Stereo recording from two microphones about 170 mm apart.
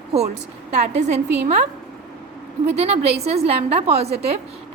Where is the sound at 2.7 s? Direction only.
35° right (ahead or behind).